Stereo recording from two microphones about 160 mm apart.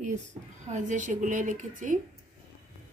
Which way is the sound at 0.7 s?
50° right (ahead or behind).